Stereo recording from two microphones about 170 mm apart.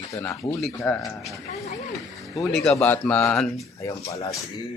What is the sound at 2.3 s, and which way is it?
Speech, centre (ahead or behind).